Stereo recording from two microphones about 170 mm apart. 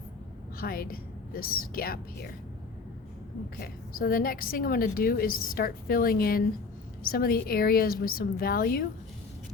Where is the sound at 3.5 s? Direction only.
60° left (ahead or behind).